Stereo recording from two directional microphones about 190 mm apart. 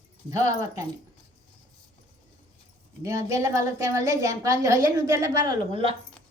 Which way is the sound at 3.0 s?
15° right (ahead or behind).